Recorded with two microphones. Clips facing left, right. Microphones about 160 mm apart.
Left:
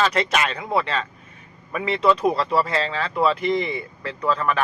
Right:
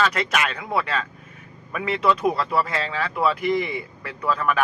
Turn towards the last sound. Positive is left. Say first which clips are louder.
# left 1 dB
turn(degrees=-5)  # may be behind; listen again after turning